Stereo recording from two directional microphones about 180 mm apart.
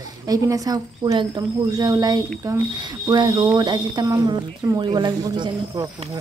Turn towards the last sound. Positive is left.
turn(degrees=-20)  # may be behind; listen again after turning